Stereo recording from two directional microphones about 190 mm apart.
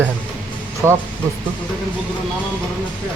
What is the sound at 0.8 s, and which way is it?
Speech, 15° right (ahead or behind).